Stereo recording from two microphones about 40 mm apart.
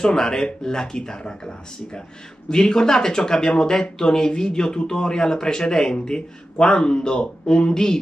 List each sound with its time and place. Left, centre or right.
0.0 s speech: centre
2.5 s speech: centre